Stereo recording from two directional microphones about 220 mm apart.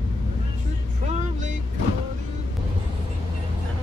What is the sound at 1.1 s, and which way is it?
Music, 35° right (ahead or behind).